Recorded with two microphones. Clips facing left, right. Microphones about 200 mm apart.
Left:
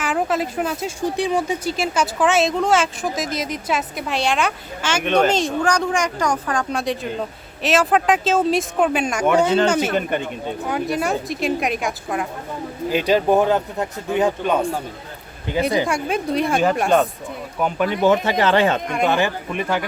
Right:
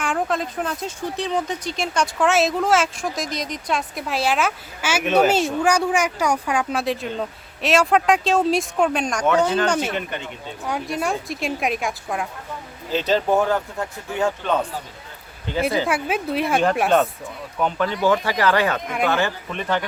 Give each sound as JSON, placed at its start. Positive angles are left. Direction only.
{"t": 0.0, "sound": "speech", "side_deg": 5}
{"t": 9.9, "sound": "speech", "side_deg": 50}
{"t": 10.7, "sound": "speech", "side_deg": 0}
{"t": 12.9, "sound": "speech", "side_deg": 10}
{"t": 15.9, "sound": "speech", "side_deg": -5}
{"t": 17.6, "sound": "speech", "side_deg": 10}